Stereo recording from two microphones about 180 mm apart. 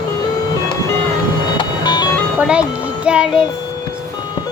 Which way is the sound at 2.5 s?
5° right (ahead or behind).